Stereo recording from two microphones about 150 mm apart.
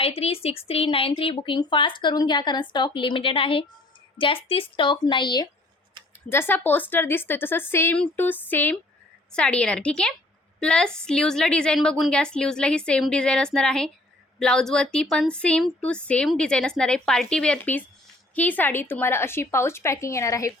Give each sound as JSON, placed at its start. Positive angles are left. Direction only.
{"t": 0.0, "sound": "speech", "side_deg": 40}
{"t": 6.2, "sound": "a woman's voice", "side_deg": 15}